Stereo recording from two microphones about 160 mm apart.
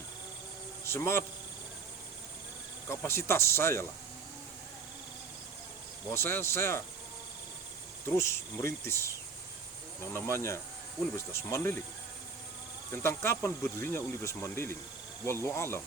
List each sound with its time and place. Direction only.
0.9 s a man's voice: 15° left (ahead or behind)
2.9 s speech: 15° left (ahead or behind)
6.1 s speech: 15° left (ahead or behind)
8.1 s speech: 15° left (ahead or behind)
12.9 s speech: 15° left (ahead or behind)